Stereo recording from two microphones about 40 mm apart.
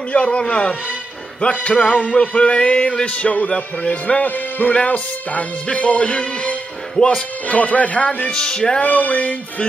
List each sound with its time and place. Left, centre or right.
0.1 s a man's voice: left
1.4 s music: left
7.4 s music: left
8.3 s a man's voice: centre
8.8 s music: left